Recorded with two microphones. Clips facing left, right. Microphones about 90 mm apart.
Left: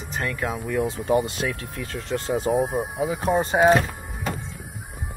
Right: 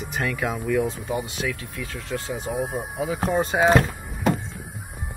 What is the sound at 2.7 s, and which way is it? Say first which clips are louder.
Speech: left 2 dB; 15° left (ahead or behind).